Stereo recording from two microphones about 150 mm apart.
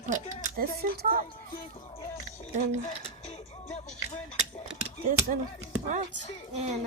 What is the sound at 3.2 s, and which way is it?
Music, 50° left (ahead or behind).